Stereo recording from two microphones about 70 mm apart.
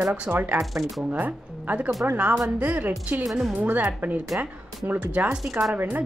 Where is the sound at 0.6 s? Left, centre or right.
Centre.